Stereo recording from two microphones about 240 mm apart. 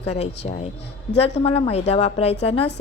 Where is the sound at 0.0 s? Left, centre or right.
Left.